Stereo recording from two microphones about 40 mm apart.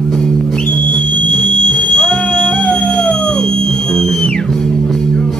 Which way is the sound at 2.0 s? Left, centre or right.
Centre.